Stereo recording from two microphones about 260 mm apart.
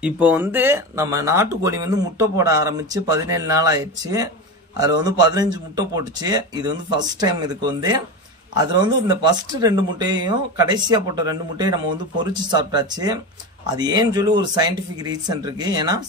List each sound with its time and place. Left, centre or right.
0.0 s speech: centre